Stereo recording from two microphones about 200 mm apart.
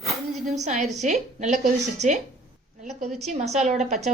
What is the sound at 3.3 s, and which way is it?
Speech, 35° right (ahead or behind).